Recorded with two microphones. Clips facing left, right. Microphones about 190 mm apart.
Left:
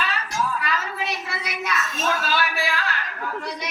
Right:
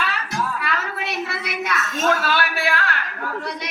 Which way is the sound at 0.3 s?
65° right (ahead or behind).